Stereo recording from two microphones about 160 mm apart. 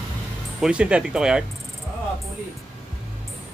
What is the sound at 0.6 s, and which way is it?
Turkey, 5° right (ahead or behind).